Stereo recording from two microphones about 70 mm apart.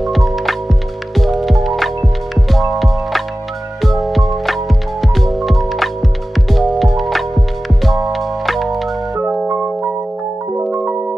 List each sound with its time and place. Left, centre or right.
0.0 s music: centre
10.5 s music: right